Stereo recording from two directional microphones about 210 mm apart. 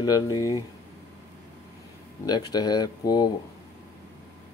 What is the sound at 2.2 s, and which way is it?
Speech, 20° left (ahead or behind).